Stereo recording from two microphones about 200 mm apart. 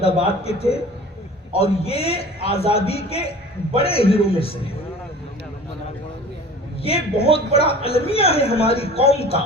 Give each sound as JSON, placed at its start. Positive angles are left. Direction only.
{"t": 0.0, "sound": "a man's voice", "side_deg": 30}
{"t": 6.8, "sound": "a woman's voice", "side_deg": 30}